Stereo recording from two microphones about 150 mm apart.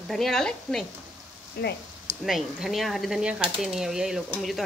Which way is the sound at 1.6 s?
90° left.